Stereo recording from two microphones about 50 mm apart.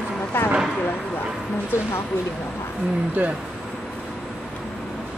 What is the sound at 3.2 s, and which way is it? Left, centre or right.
Speech, right.